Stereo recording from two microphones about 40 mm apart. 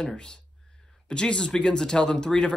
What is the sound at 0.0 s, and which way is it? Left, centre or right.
Speech, left.